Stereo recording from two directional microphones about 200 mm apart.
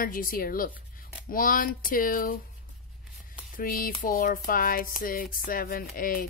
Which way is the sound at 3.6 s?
45° left (ahead or behind).